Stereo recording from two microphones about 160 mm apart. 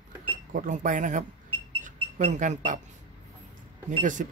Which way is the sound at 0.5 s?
55° right (ahead or behind).